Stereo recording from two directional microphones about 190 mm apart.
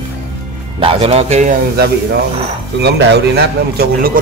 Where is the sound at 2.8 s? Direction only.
60° right (ahead or behind).